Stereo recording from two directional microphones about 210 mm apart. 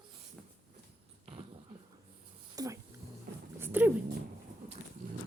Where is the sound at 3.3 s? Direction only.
50° right (ahead or behind).